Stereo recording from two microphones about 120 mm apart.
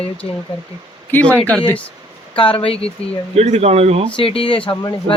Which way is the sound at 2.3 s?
45° left (ahead or behind).